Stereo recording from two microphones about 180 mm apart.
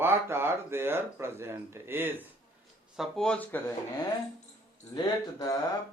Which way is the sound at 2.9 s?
Centre (ahead or behind).